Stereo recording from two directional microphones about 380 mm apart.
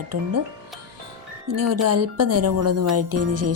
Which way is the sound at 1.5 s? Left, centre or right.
Right.